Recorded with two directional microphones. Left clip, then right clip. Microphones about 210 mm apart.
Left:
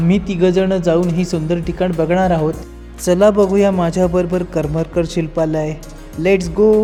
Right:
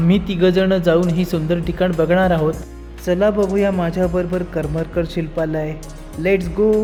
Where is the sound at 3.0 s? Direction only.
30° left (ahead or behind).